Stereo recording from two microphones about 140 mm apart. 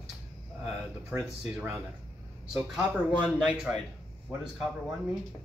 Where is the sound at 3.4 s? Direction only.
5° right (ahead or behind).